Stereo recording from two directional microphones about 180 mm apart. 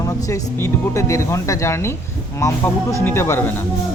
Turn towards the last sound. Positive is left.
turn(degrees=15)  # may be behind; listen again after turning